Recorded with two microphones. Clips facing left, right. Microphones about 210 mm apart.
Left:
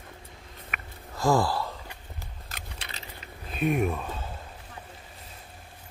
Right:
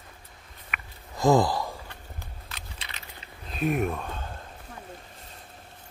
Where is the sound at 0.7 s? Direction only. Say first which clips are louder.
Right 1 dB; 45° left (ahead or behind).